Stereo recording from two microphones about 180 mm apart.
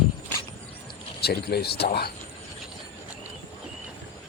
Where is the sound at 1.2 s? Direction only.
60° left (ahead or behind).